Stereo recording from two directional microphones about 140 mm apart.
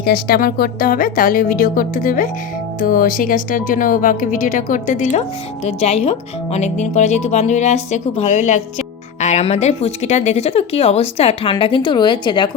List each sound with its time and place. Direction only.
0.0 s a woman's voice: 90° left; by 2.3 s 70° left (ahead or behind)
2.8 s speech: 90° left; by 5.2 s 60° left (ahead or behind)
5.6 s a woman's voice: 45° left (ahead or behind)